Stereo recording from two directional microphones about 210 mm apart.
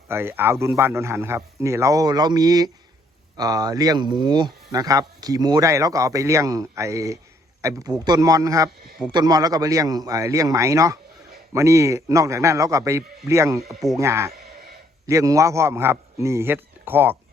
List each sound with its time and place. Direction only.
0.1 s speech: 10° right (ahead or behind)